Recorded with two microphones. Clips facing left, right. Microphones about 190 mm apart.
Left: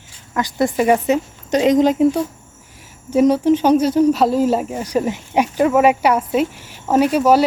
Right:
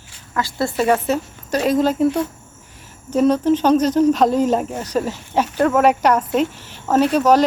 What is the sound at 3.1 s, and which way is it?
Speech, 10° left (ahead or behind).